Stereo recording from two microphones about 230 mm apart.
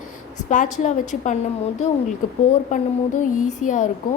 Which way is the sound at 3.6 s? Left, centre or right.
Left.